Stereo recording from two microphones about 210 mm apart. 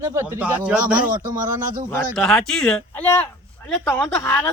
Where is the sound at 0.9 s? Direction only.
40° right (ahead or behind).